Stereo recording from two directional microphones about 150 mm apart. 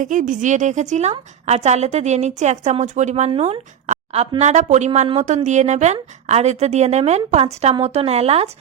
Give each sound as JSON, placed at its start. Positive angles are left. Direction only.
{"t": 0.0, "sound": "a woman's voice", "side_deg": -60}